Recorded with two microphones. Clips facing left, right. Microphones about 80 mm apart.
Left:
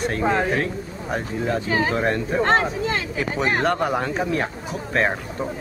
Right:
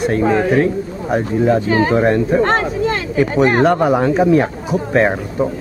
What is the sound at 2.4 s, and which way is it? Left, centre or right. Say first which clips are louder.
Speech: right 4 dB; right.